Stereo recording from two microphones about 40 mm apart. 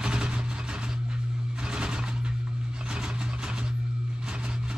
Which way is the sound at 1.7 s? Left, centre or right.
Centre.